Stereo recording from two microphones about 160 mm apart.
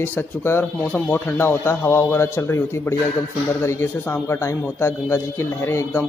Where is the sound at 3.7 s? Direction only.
15° left (ahead or behind).